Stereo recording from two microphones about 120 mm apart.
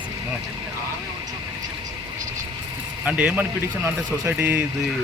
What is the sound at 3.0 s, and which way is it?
A man's voice, 10° right (ahead or behind).